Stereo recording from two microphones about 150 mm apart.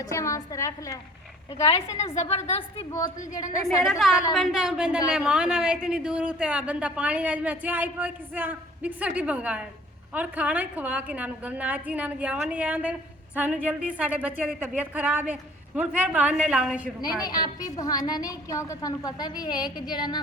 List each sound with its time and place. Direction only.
0.0 s a woman's voice: 20° left (ahead or behind)
1.6 s a woman's voice: 45° left (ahead or behind)
3.8 s a woman's voice: centre (ahead or behind)
17.0 s a woman's voice: 25° left (ahead or behind)